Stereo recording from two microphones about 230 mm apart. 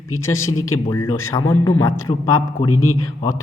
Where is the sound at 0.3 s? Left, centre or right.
Left.